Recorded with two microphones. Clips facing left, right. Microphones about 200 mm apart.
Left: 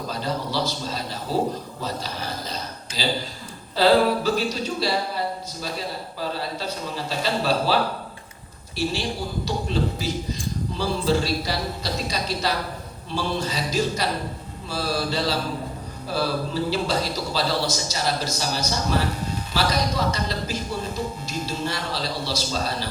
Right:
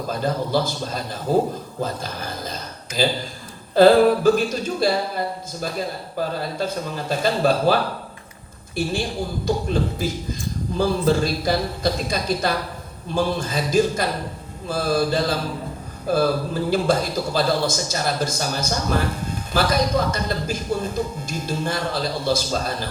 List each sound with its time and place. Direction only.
0.1 s a man's voice: 50° right (ahead or behind)
1.8 s a sound: 50° right (ahead or behind)
3.8 s a man's voice: 50° right (ahead or behind)